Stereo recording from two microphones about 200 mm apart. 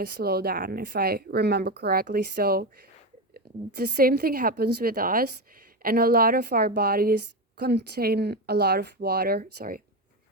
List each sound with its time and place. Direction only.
0.0 s speech: 50° right (ahead or behind)